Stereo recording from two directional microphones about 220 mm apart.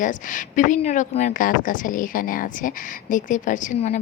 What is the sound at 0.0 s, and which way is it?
A woman's voice, 35° left (ahead or behind).